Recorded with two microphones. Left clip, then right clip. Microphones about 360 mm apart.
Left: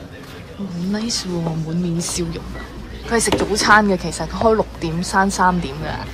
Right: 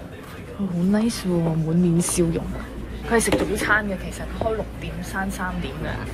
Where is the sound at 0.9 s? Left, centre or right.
Centre.